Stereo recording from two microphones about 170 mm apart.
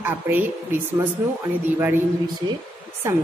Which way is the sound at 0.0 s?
10° right (ahead or behind).